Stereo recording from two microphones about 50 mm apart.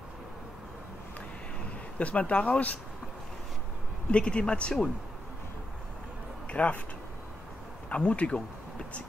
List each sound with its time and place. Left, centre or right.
2.0 s speech: left
4.1 s speech: left
6.5 s speech: left
7.9 s speech: left